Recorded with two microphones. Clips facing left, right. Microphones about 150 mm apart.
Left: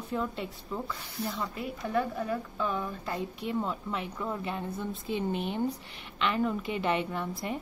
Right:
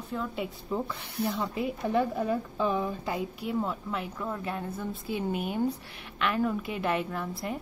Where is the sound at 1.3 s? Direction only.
20° right (ahead or behind).